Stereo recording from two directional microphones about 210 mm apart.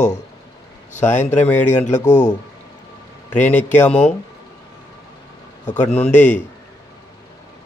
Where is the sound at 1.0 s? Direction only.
10° left (ahead or behind).